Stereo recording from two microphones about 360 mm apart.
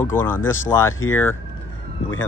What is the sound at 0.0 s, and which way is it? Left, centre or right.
Speech, centre.